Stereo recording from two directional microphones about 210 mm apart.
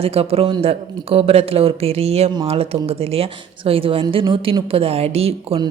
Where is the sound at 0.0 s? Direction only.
30° right (ahead or behind).